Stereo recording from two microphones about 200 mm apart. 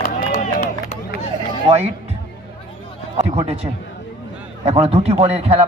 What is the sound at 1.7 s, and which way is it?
Speech, 30° right (ahead or behind).